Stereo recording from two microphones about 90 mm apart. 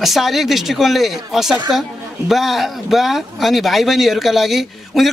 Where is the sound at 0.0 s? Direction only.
Centre (ahead or behind).